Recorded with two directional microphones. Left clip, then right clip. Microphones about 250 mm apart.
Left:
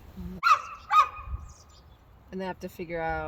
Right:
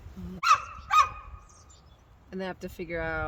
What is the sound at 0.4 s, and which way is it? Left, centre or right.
Dog, right.